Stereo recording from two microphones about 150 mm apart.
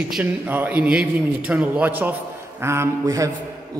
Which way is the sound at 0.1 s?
10° right (ahead or behind).